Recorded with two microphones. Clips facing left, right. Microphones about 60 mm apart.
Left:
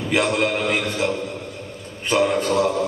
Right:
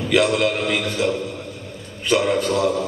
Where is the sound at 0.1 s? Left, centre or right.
Left.